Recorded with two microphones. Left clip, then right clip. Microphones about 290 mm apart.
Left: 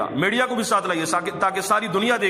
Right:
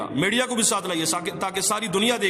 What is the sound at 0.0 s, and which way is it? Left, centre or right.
A man's voice, centre.